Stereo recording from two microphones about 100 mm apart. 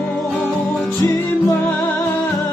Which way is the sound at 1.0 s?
35° left (ahead or behind).